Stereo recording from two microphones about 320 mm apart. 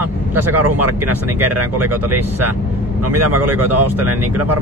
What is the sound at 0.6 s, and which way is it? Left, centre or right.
Speech, right.